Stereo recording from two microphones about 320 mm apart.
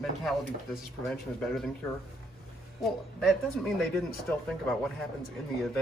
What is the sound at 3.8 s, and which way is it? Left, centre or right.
Speech, centre.